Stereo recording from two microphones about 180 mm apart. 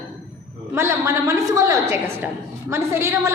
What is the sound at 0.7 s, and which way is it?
A woman's voice, 15° right (ahead or behind).